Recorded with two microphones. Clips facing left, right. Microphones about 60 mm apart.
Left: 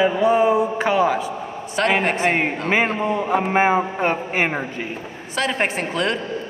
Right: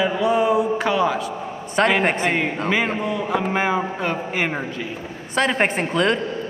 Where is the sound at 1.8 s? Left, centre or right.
Centre.